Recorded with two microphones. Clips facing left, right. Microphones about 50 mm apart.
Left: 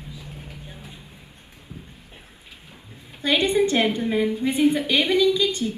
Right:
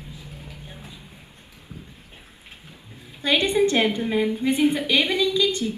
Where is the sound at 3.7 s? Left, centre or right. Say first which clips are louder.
Even; right.